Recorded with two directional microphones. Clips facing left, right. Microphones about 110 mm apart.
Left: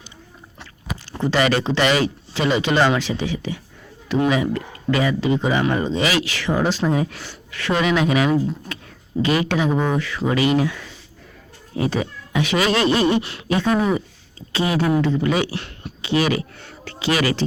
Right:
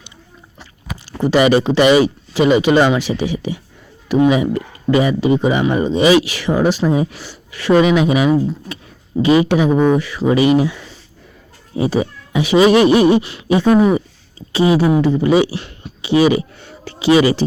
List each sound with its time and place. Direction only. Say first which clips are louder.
1.2 s speech: right 6 dB; 15° right (ahead or behind)